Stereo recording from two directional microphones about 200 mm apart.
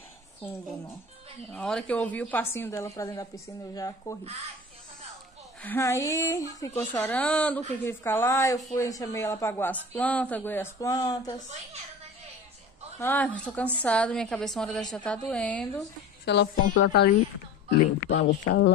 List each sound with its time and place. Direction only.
1.5 s a woman's voice: 5° left (ahead or behind)
5.6 s a woman's voice: 10° left (ahead or behind)
13.0 s a woman's voice: 10° left (ahead or behind)
16.3 s speech: 65° left (ahead or behind)